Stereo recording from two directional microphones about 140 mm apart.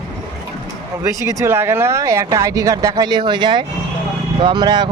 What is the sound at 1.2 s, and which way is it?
Speech, 25° right (ahead or behind).